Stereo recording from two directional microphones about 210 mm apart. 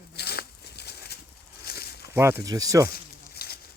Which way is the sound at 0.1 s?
50° left (ahead or behind).